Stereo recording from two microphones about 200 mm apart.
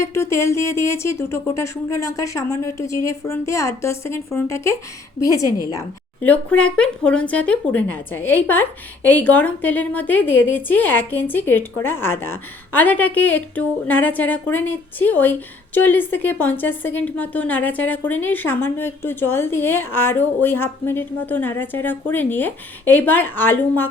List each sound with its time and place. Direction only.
0.0 s a woman's voice: 15° left (ahead or behind)